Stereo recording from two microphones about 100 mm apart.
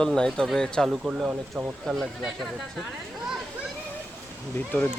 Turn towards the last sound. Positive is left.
turn(degrees=20)  # may be behind; listen again after turning